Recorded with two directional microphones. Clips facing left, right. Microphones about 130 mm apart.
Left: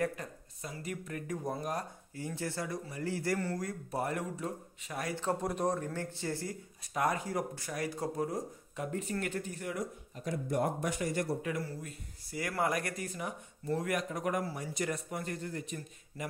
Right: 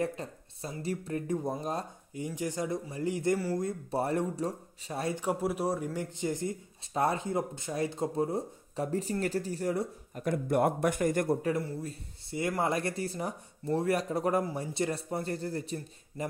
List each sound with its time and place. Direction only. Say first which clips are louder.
0.0 s speech: right 2 dB; 25° right (ahead or behind)
5.1 s speech: right 1 dB; 10° right (ahead or behind)
6.9 s speech: right 3 dB; 30° right (ahead or behind)
10.1 s speech: right 5 dB; 55° right (ahead or behind)
11.4 s speech: right 6 dB; 30° right (ahead or behind)